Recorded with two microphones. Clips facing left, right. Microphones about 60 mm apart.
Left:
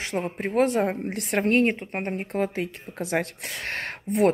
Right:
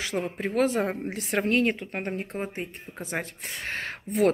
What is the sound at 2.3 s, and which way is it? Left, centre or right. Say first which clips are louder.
Speech: left 6 dB; left.